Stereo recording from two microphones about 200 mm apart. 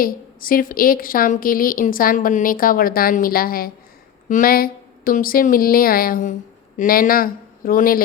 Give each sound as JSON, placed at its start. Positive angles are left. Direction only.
{"t": 0.0, "sound": "a woman's voice", "side_deg": 45}